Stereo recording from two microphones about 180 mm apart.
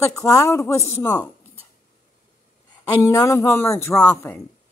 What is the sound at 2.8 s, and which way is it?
A woman's voice, 15° left (ahead or behind).